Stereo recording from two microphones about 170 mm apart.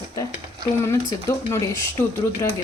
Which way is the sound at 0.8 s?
15° left (ahead or behind).